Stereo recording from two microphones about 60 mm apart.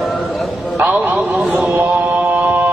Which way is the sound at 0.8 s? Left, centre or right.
Centre.